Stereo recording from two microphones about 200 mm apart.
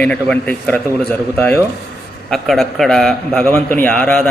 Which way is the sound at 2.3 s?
Centre (ahead or behind).